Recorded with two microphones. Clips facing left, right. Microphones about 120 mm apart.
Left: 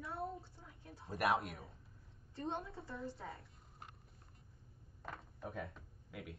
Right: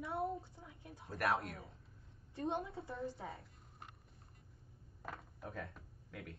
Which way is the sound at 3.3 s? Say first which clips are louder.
Right 1 dB; centre (ahead or behind).